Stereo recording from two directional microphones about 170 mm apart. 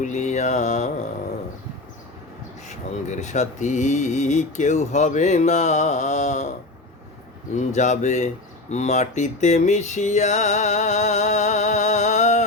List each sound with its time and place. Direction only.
0.0 s speech: 45° left (ahead or behind)
2.6 s speech: 45° left (ahead or behind)
7.5 s speech: 45° left (ahead or behind)